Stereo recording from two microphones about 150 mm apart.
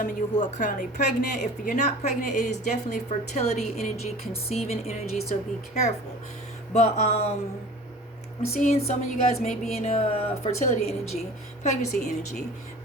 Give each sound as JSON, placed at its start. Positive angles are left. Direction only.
{"t": 0.0, "sound": "a woman's voice", "side_deg": 60}
{"t": 6.7, "sound": "a woman's voice", "side_deg": 45}
{"t": 8.6, "sound": "a woman's voice", "side_deg": 50}